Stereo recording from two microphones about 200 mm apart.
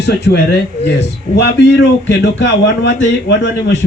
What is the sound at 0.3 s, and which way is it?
Speech, 60° left (ahead or behind).